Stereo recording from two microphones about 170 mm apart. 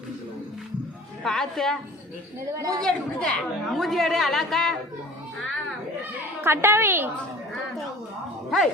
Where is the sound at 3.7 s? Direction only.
Centre (ahead or behind).